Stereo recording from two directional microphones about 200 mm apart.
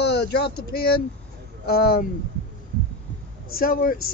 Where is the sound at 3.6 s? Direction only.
45° left (ahead or behind).